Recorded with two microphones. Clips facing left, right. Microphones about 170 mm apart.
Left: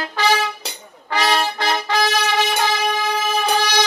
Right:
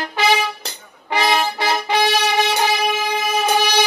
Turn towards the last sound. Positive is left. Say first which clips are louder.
# right 2 dB
turn(degrees=-10)  # may be behind; listen again after turning